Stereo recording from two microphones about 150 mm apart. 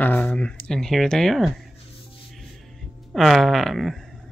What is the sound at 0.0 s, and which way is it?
Speech, 10° left (ahead or behind).